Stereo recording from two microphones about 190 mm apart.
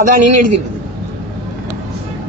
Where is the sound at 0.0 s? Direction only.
40° right (ahead or behind).